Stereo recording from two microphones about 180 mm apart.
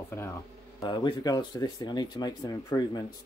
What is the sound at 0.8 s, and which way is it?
Speech, 25° left (ahead or behind).